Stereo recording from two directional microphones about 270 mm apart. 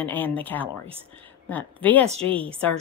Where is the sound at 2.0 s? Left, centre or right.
Right.